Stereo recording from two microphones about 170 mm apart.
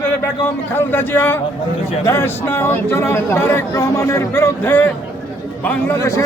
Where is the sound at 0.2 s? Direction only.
10° left (ahead or behind).